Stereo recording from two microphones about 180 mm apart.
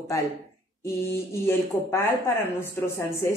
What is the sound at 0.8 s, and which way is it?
A woman's voice, 15° left (ahead or behind).